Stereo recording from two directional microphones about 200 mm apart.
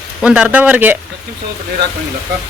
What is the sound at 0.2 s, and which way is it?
Speech, 5° right (ahead or behind).